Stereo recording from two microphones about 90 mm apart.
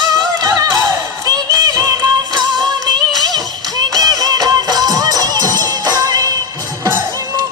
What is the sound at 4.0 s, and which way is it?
Music, 45° right (ahead or behind).